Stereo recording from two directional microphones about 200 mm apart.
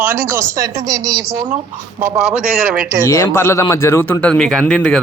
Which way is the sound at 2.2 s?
5° right (ahead or behind).